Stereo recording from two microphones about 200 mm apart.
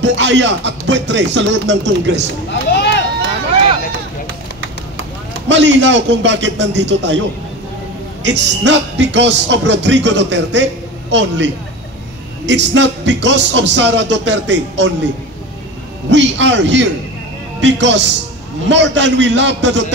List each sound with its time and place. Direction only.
0.0 s speech: 60° right (ahead or behind)
2.7 s a sound: 60° left (ahead or behind)
5.5 s speech: 65° right (ahead or behind)
8.2 s speech: 60° right (ahead or behind)
16.1 s speech: 65° right (ahead or behind)